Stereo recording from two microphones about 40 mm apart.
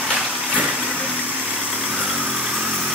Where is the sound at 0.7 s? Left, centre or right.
Right.